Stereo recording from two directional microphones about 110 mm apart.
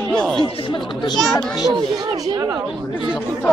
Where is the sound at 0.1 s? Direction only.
10° left (ahead or behind).